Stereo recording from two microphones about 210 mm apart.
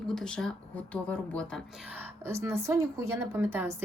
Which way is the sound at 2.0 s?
10° right (ahead or behind).